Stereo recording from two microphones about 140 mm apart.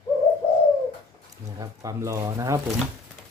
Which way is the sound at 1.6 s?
20° right (ahead or behind).